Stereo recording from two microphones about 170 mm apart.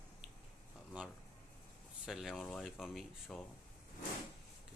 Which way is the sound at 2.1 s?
Centre (ahead or behind).